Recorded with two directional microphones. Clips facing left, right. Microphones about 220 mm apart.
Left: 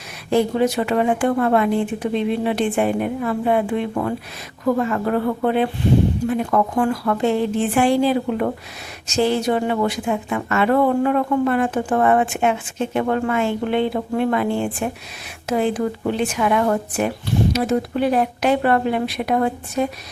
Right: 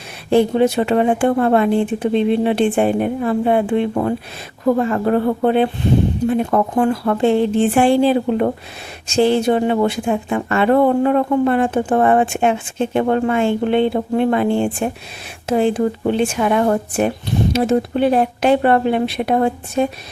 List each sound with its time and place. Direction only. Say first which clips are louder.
0.3 s a woman's voice: right 4 dB; 30° right (ahead or behind)